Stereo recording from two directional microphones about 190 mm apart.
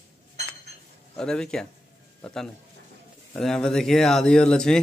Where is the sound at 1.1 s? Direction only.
5° left (ahead or behind).